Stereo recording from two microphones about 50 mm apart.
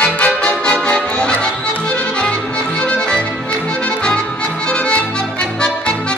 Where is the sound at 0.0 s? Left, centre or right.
Left.